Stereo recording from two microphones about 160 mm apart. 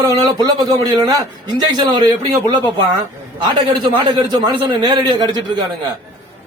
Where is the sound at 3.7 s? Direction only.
30° right (ahead or behind).